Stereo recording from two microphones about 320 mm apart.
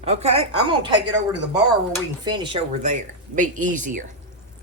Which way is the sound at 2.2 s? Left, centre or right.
Centre.